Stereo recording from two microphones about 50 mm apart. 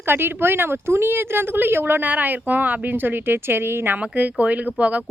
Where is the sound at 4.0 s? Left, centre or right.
Right.